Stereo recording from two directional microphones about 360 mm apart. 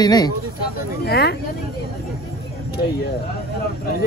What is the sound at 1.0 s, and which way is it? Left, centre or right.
Speech, left.